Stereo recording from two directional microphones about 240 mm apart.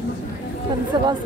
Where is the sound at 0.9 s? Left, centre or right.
Centre.